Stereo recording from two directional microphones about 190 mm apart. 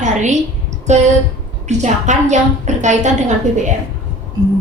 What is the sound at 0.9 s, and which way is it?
A woman's voice, 35° right (ahead or behind).